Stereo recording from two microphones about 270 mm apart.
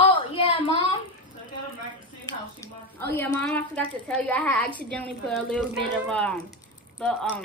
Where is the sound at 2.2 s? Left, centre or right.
Centre.